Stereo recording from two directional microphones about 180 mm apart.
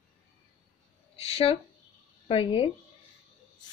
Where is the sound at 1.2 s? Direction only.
35° left (ahead or behind).